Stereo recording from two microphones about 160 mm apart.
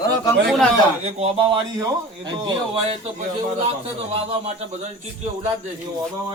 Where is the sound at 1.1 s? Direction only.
40° right (ahead or behind).